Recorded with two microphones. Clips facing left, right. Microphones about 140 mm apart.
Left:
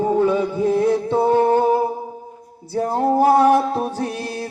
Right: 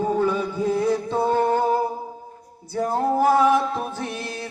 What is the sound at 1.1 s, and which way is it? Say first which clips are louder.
Humming: left 6 dB; 25° left (ahead or behind).